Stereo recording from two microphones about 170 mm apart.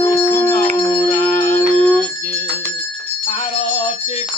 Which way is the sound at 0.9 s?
35° left (ahead or behind).